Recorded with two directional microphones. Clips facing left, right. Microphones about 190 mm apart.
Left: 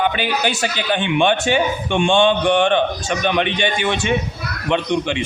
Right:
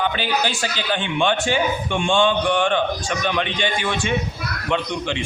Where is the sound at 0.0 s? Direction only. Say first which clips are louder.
Left 3 dB; 15° left (ahead or behind).